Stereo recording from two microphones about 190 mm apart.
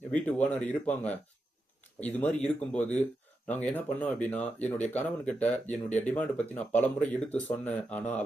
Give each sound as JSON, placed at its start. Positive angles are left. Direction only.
{"t": 0.1, "sound": "speech", "side_deg": 5}